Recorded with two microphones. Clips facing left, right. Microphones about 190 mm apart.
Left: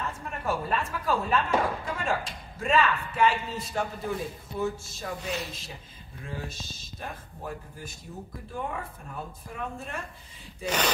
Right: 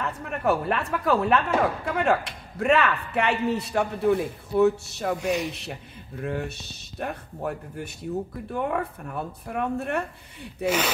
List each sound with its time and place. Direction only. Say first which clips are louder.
0.0 s a woman's voice: right 6 dB; 65° right (ahead or behind)
10.6 s speech: right 4 dB; 5° right (ahead or behind)